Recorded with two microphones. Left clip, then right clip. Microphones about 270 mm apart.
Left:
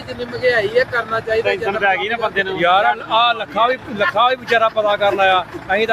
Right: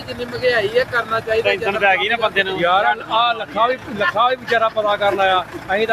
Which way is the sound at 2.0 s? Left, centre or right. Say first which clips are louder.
Right 1 dB; centre.